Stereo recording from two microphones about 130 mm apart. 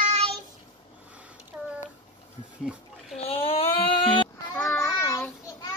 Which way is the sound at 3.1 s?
50° left (ahead or behind).